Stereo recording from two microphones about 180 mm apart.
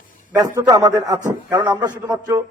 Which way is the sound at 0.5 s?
20° right (ahead or behind).